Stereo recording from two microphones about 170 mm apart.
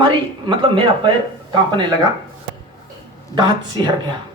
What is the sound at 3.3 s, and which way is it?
Speech, 25° right (ahead or behind).